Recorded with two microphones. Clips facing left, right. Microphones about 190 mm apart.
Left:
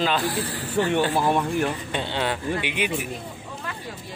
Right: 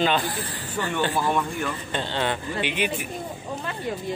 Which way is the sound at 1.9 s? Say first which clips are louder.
Right 2 dB; 10° left (ahead or behind).